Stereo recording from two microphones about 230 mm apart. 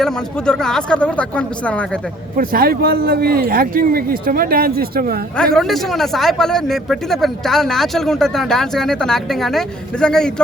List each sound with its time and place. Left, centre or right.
0.0 s speech: centre
2.3 s speech: right
5.5 s speech: centre